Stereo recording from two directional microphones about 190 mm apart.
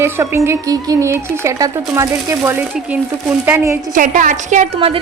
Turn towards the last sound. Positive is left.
turn(degrees=-35)  # may be behind; listen again after turning